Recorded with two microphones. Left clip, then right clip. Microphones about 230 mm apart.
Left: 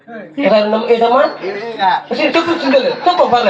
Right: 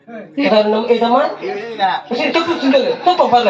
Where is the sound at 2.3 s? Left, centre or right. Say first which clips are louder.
Left 1 dB; left.